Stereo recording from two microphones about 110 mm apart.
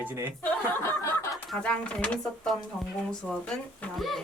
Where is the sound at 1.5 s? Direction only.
10° left (ahead or behind).